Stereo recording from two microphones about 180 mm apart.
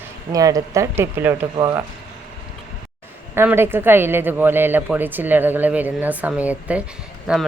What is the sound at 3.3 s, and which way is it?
Speech, 15° right (ahead or behind).